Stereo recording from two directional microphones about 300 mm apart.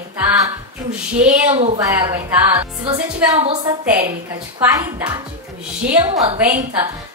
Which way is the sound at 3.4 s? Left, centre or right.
Centre.